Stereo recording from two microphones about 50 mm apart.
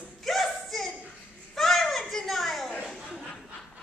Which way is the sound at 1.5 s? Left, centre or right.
Centre.